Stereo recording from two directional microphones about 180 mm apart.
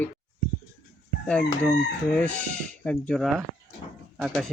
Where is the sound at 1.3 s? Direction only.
5° left (ahead or behind).